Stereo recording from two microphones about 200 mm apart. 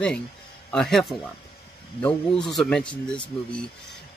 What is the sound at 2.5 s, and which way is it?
Speech, 5° left (ahead or behind).